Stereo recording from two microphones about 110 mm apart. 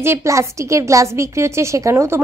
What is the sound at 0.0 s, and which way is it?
A woman's voice, 25° right (ahead or behind).